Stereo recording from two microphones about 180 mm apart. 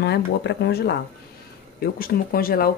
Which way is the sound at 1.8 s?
55° left (ahead or behind).